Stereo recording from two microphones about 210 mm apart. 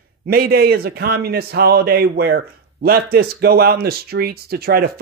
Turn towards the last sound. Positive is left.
turn(degrees=-45)  # may be behind; listen again after turning